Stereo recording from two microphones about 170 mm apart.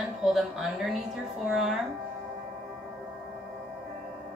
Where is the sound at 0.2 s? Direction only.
Centre (ahead or behind).